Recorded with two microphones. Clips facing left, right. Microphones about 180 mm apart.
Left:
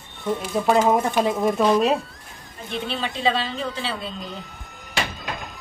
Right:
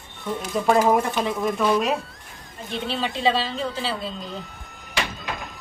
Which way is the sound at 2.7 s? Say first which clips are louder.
Right 1 dB; centre (ahead or behind).